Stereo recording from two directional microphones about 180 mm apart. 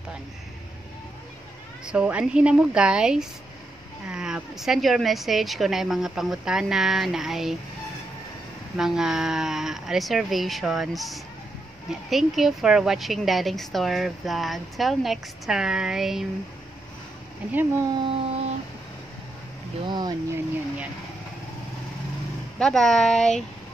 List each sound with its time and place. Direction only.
1.9 s a woman's voice: 5° right (ahead or behind)
8.7 s a woman's voice: 5° right (ahead or behind)
17.5 s speech: 10° right (ahead or behind)
18.0 s a sound: 30° right (ahead or behind)
19.9 s speech: 25° right (ahead or behind)
22.6 s a woman's voice: 5° left (ahead or behind)